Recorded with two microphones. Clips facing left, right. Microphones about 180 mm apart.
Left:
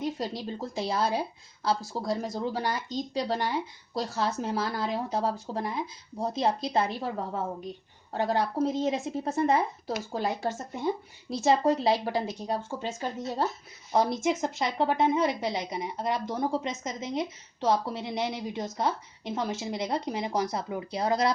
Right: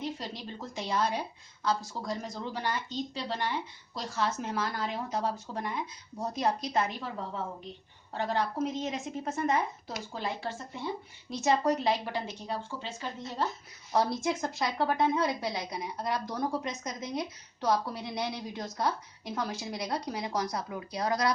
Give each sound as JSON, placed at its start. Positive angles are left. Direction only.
{"t": 0.0, "sound": "a woman's voice", "side_deg": 40}
{"t": 8.1, "sound": "speech", "side_deg": 40}
{"t": 11.3, "sound": "speech", "side_deg": 30}
{"t": 13.9, "sound": "a woman's voice", "side_deg": 20}